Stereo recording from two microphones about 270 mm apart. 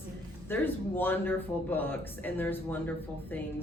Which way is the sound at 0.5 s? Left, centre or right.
Centre.